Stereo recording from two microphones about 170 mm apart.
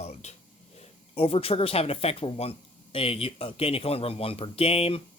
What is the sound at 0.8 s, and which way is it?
Speech, 35° left (ahead or behind).